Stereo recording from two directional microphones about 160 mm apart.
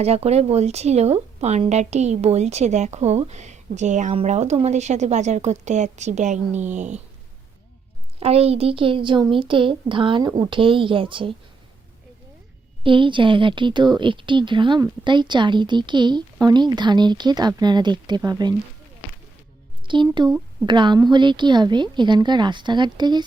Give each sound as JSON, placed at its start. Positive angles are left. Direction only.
{"t": 0.0, "sound": "speech", "side_deg": -40}
{"t": 8.2, "sound": "a woman's voice", "side_deg": -40}
{"t": 12.8, "sound": "speech", "side_deg": -30}
{"t": 19.9, "sound": "a woman's voice", "side_deg": -30}